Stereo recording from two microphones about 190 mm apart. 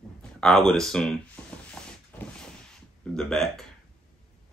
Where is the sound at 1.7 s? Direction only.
5° left (ahead or behind).